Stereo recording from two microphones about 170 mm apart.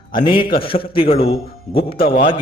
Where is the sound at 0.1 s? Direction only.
30° left (ahead or behind).